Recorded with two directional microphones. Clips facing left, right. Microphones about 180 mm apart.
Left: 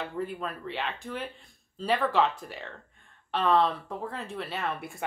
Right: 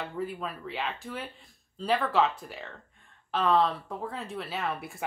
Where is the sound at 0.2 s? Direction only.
Centre (ahead or behind).